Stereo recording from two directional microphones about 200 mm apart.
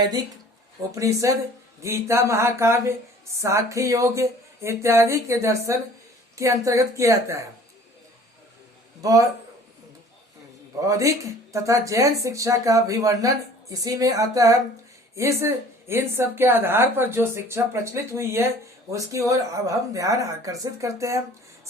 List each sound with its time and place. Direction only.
0.9 s speech: 15° right (ahead or behind)
9.0 s a man's voice: 15° right (ahead or behind)
10.8 s speech: 15° right (ahead or behind)